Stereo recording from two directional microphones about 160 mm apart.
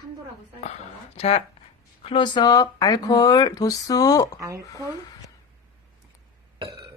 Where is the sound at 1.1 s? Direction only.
40° left (ahead or behind); by 4.4 s 20° left (ahead or behind).